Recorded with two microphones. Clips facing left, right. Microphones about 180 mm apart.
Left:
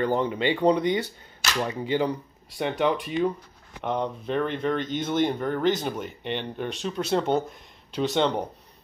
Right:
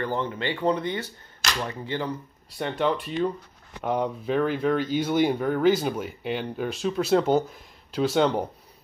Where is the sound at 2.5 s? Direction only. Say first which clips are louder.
Left 1 dB; 5° left (ahead or behind).